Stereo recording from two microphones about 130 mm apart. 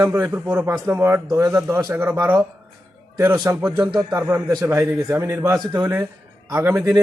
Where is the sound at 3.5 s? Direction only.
20° right (ahead or behind).